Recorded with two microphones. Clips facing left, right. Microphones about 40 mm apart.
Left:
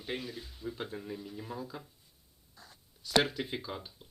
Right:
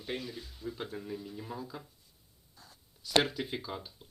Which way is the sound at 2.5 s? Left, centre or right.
Left.